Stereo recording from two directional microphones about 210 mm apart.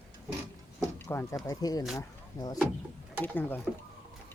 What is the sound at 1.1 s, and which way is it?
Speech, 10° left (ahead or behind).